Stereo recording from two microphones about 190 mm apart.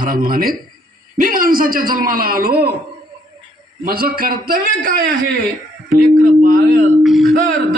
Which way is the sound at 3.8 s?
50° right (ahead or behind).